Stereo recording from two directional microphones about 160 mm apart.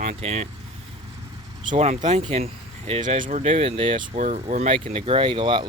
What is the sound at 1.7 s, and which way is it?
Speech, 45° right (ahead or behind).